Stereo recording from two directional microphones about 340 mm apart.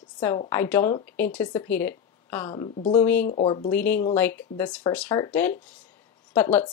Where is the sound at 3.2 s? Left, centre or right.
Centre.